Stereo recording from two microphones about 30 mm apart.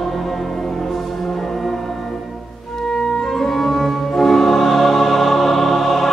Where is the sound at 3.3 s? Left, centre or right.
Centre.